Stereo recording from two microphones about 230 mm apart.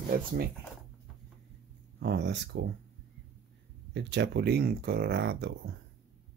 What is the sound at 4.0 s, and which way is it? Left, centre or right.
Speech, right.